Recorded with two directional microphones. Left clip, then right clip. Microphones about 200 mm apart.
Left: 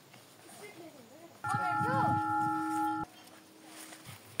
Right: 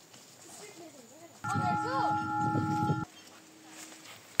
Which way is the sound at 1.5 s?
Centre (ahead or behind).